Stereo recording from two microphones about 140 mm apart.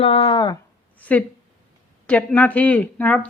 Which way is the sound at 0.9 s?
10° left (ahead or behind).